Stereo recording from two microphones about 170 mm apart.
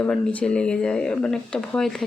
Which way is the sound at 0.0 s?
10° left (ahead or behind).